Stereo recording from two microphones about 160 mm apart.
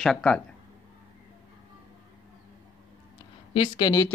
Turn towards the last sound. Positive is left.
turn(degrees=25)  # may be behind; listen again after turning